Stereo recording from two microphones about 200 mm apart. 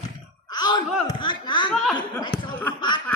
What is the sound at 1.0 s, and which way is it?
Speech, 25° left (ahead or behind).